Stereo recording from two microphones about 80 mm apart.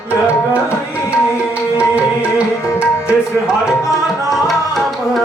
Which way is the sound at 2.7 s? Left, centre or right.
Centre.